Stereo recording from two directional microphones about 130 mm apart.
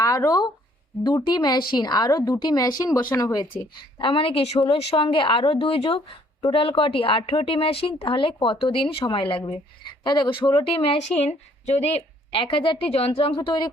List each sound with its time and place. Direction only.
0.0 s a woman's voice: 25° left (ahead or behind)